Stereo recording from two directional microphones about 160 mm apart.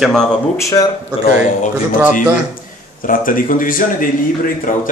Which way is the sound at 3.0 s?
60° left (ahead or behind).